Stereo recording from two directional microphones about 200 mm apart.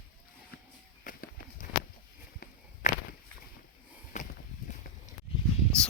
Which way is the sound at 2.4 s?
45° left (ahead or behind).